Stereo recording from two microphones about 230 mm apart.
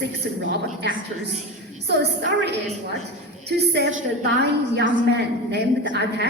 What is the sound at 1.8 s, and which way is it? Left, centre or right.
A woman's voice, right.